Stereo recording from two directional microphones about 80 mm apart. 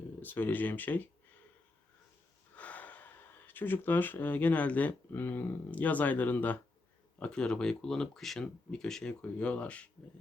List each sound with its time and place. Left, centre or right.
0.2 s speech: left
2.6 s speech: centre
7.2 s speech: centre